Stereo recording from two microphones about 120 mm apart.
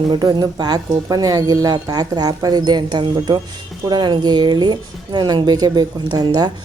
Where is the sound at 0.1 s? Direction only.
35° right (ahead or behind).